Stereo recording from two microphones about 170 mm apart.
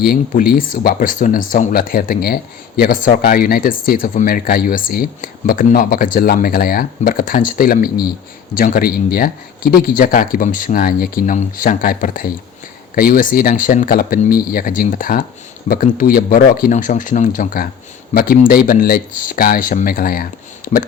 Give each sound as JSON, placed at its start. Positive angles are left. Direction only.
{"t": 0.0, "sound": "speech", "side_deg": 60}